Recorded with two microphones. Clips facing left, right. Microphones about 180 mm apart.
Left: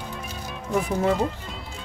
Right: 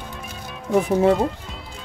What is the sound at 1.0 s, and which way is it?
Speech, 60° right (ahead or behind).